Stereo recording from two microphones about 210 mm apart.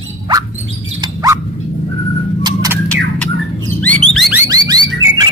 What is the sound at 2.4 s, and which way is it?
Bird, 15° right (ahead or behind).